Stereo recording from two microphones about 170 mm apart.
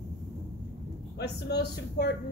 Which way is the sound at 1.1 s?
75° left (ahead or behind).